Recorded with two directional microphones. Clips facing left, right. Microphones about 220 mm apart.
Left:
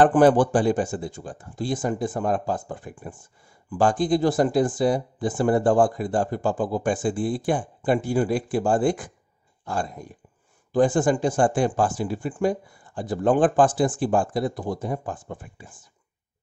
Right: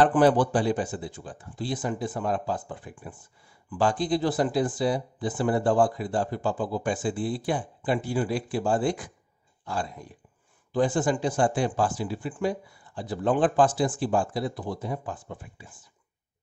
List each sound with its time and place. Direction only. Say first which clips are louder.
0.0 s speech: left 4 dB; 50° left (ahead or behind)